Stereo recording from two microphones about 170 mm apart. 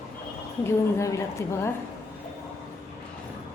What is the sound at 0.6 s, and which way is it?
A woman's voice, 15° left (ahead or behind).